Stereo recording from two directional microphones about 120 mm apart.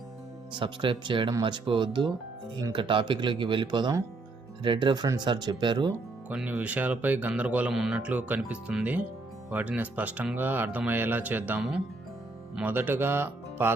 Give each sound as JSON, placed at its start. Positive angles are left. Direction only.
{"t": 0.5, "sound": "speech", "side_deg": -45}
{"t": 6.2, "sound": "speech", "side_deg": -10}